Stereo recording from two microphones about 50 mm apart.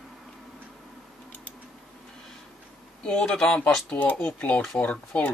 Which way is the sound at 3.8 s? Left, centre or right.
Left.